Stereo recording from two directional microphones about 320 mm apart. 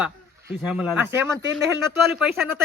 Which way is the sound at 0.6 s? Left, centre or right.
Centre.